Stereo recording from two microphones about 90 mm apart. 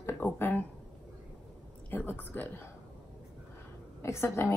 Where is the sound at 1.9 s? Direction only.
20° left (ahead or behind).